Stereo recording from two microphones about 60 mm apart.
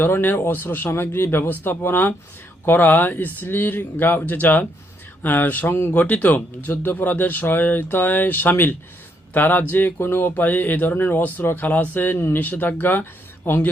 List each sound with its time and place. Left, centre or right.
0.0 s speech: left
5.9 s speech: left